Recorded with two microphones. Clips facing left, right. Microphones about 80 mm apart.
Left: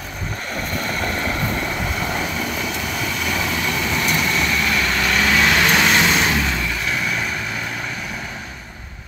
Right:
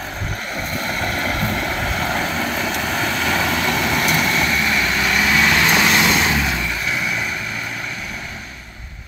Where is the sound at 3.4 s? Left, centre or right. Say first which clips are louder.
Right 3 dB; right.